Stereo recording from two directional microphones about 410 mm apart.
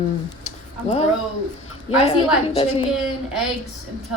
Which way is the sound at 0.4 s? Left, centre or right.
Centre.